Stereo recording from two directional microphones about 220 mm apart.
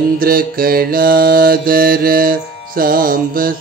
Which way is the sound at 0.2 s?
40° right (ahead or behind).